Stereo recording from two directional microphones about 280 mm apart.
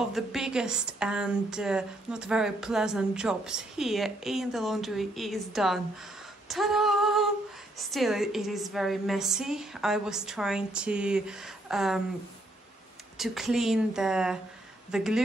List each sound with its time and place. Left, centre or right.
0.1 s a woman's voice: centre
13.2 s a woman's voice: centre